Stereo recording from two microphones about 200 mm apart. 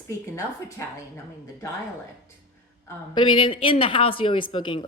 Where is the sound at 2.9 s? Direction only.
25° left (ahead or behind).